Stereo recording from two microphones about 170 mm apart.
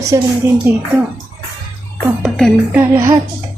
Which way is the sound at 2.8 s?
20° right (ahead or behind).